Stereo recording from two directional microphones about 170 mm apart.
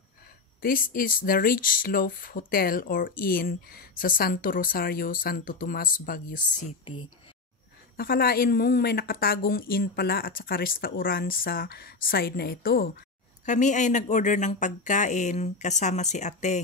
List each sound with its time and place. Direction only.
0.6 s speech: 55° left (ahead or behind)
6.8 s speech: 30° left (ahead or behind)
8.0 s speech: 65° left (ahead or behind)
13.5 s speech: 45° left (ahead or behind)